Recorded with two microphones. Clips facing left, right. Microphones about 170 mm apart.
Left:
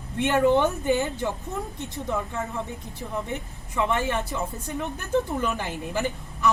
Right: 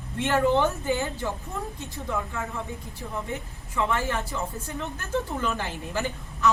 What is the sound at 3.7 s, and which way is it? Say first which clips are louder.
A woman's voice: left 2 dB; 20° left (ahead or behind).